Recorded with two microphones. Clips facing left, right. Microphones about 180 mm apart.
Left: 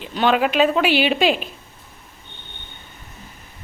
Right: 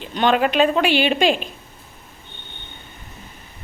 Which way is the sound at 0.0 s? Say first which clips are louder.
Even; 5° left (ahead or behind).